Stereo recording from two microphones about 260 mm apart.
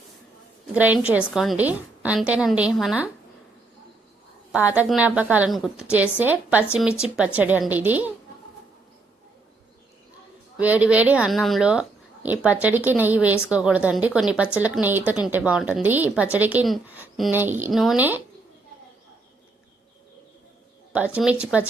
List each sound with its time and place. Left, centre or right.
0.7 s speech: centre
4.5 s a woman's voice: centre
10.6 s speech: centre
20.9 s speech: centre